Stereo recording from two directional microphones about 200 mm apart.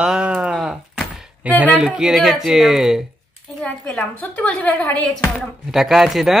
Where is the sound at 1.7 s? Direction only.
5° right (ahead or behind).